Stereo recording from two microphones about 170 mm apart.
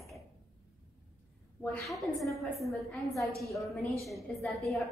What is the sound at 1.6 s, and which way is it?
A woman's voice, 5° left (ahead or behind).